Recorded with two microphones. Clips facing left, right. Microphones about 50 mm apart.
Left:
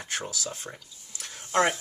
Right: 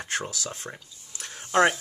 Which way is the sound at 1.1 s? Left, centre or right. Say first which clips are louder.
Right 3 dB; right.